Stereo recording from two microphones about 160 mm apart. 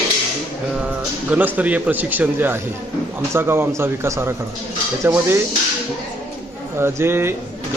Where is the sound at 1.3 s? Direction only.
10° right (ahead or behind).